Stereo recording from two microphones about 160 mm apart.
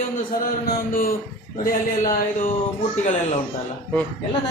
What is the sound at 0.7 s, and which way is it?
Mantra, 65° left (ahead or behind).